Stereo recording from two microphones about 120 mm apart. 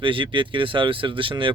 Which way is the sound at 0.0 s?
45° right (ahead or behind).